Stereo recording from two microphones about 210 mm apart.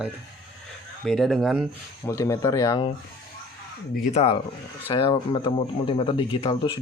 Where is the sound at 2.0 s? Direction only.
15° left (ahead or behind).